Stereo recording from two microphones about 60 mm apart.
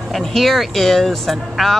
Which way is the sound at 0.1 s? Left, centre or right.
Centre.